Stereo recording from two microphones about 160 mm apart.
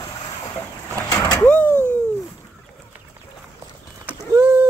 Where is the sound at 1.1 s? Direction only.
20° left (ahead or behind).